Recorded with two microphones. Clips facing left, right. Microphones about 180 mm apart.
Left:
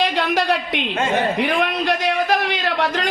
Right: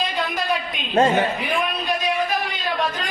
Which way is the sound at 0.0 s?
75° left (ahead or behind).